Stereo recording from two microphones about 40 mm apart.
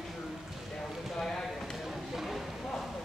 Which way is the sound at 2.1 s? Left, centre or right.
Centre.